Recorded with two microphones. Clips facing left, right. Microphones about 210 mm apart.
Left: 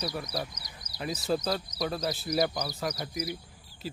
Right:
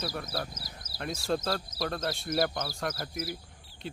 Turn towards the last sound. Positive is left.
turn(degrees=-5)  # may be behind; listen again after turning